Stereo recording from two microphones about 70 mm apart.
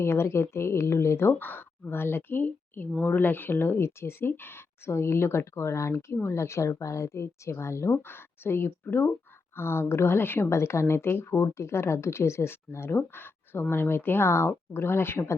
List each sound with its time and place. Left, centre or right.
0.0 s speech: left
10.5 s speech: left